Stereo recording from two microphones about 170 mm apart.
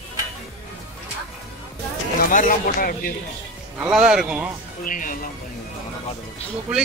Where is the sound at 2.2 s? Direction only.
50° left (ahead or behind).